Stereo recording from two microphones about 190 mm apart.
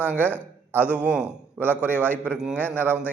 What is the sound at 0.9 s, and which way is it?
Speech, 5° right (ahead or behind).